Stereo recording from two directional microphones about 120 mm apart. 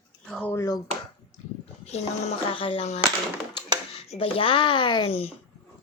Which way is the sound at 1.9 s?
65° left (ahead or behind).